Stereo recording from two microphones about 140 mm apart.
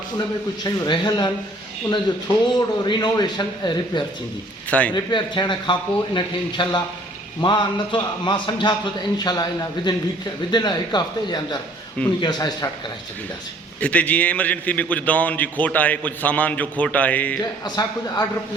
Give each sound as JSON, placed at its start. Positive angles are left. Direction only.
{"t": 0.6, "sound": "a man's voice", "side_deg": 30}
{"t": 4.7, "sound": "a man's voice", "side_deg": 10}
{"t": 4.9, "sound": "a man's voice", "side_deg": 30}
{"t": 13.8, "sound": "a man's voice", "side_deg": 10}
{"t": 17.7, "sound": "a man's voice", "side_deg": 25}